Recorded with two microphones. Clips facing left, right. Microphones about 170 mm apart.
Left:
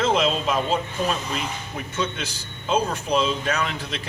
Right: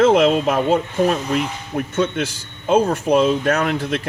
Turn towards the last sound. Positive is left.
turn(degrees=-55)  # may be behind; listen again after turning